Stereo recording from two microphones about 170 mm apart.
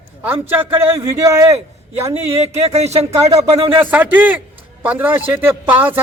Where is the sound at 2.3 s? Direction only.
40° right (ahead or behind).